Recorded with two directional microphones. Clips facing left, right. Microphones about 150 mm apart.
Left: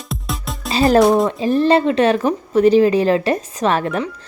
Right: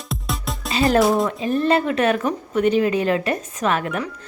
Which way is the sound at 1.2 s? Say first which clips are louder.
Left 4 dB; 30° left (ahead or behind).